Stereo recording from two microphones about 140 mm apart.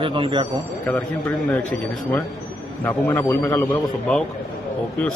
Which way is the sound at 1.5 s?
10° left (ahead or behind).